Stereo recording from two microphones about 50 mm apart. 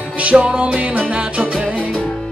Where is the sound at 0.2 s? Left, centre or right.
Right.